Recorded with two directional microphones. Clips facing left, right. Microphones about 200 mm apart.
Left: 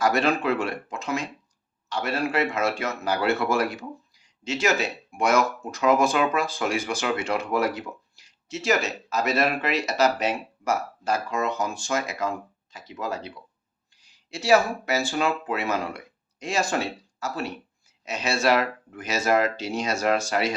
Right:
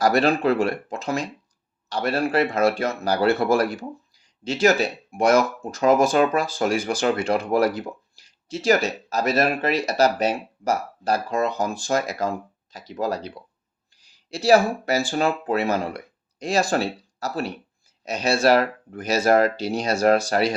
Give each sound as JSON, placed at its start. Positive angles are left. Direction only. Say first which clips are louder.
{"t": 0.0, "sound": "speech", "louder": "right 4 dB", "side_deg": -35}